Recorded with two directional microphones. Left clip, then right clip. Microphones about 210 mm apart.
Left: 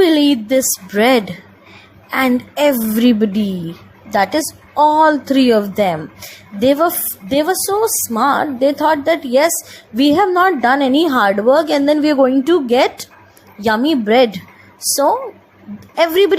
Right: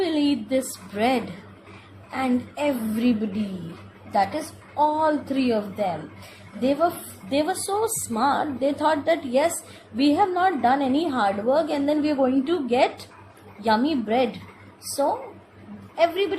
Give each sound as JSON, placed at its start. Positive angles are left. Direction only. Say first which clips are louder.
{"t": 0.0, "sound": "a woman's voice", "louder": "left 11 dB", "side_deg": 30}
{"t": 16.0, "sound": "a woman's voice", "louder": "left 10 dB", "side_deg": 35}